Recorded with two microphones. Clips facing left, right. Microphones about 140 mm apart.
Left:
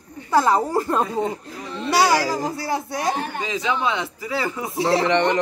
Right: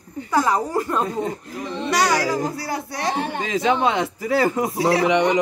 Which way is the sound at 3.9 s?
40° right (ahead or behind).